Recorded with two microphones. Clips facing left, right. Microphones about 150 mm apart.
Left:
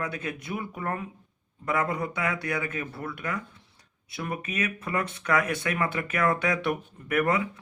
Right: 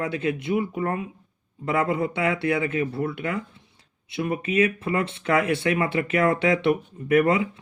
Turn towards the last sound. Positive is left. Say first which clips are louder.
# right 6 dB
turn(degrees=-25)  # may be behind; listen again after turning